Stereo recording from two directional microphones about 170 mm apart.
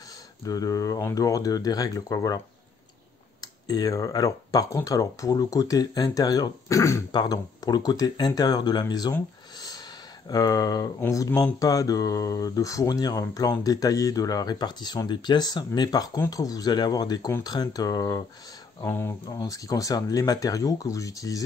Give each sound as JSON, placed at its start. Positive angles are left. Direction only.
{"t": 0.5, "sound": "speech", "side_deg": 20}